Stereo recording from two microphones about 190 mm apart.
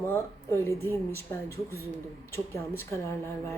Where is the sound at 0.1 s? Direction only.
10° left (ahead or behind).